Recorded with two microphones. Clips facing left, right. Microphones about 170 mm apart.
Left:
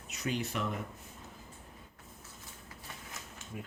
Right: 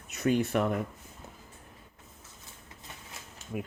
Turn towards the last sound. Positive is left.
turn(degrees=-65)  # may be behind; listen again after turning